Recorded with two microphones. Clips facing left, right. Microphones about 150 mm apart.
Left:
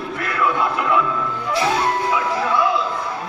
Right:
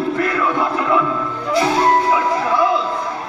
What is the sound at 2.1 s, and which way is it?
Music, 30° right (ahead or behind).